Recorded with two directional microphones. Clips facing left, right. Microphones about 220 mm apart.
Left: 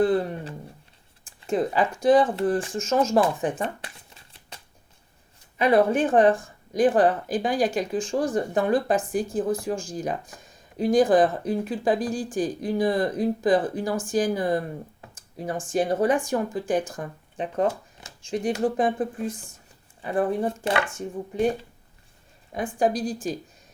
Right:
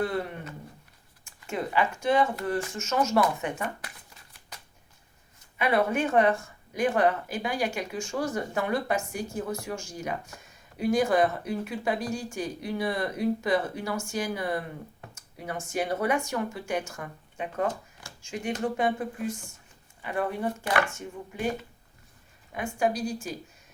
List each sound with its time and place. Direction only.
0.0 s speech: 35° left (ahead or behind)
3.6 s shuffling cards: 30° left (ahead or behind)
5.5 s speech: 35° left (ahead or behind)
22.5 s speech: 35° left (ahead or behind)